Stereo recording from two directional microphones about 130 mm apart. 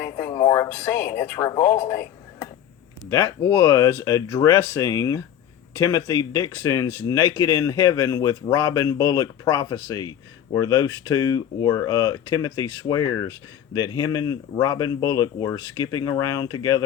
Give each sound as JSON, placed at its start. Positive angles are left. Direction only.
{"t": 0.0, "sound": "speech", "side_deg": 25}
{"t": 1.7, "sound": "a sound", "side_deg": 20}
{"t": 3.1, "sound": "speech", "side_deg": 25}